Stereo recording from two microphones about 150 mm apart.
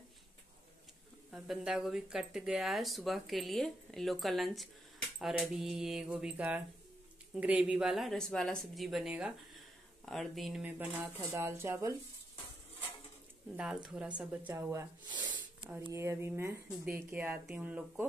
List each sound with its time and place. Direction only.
1.3 s speech: 5° right (ahead or behind)
13.8 s speech: 5° right (ahead or behind); by 15.4 s 30° right (ahead or behind)
15.9 s speech: 20° right (ahead or behind)